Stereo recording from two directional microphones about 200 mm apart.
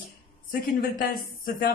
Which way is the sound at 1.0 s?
45° left (ahead or behind).